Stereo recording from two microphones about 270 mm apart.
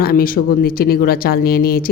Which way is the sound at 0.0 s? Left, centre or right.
Left.